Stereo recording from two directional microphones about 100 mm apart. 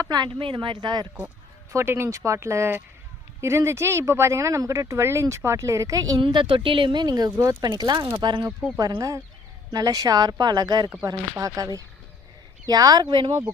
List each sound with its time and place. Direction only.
0.0 s speech: 45° right (ahead or behind)
0.3 s speech: 60° right (ahead or behind)
1.7 s speech: 25° right (ahead or behind)
6.2 s speech: 55° right (ahead or behind)
8.0 s speech: 50° right (ahead or behind)
9.0 s speech: 35° right (ahead or behind); by 13.4 s 50° right (ahead or behind)